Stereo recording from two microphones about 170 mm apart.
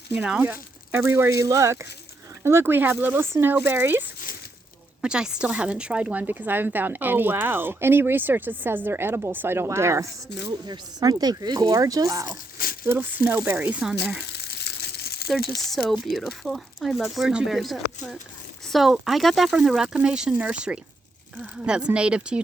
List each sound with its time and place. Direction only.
0.1 s speech: 10° right (ahead or behind)
5.0 s speech: 5° right (ahead or behind)
10.2 s speech: 90° left
10.7 s speech: 25° right (ahead or behind); by 13.9 s 10° right (ahead or behind)
14.2 s crumpling: 75° left (ahead or behind)
15.4 s speech: centre (ahead or behind)